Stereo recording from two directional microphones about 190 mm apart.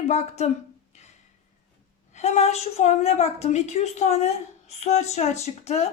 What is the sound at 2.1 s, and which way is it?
A woman's voice, 35° left (ahead or behind).